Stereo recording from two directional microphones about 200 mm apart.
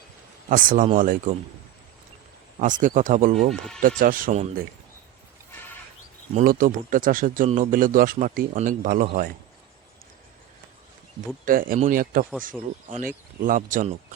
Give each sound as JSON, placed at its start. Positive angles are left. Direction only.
{"t": 0.5, "sound": "speech", "side_deg": -45}
{"t": 2.8, "sound": "speech", "side_deg": -40}
{"t": 6.3, "sound": "speech", "side_deg": -45}
{"t": 11.4, "sound": "speech", "side_deg": -45}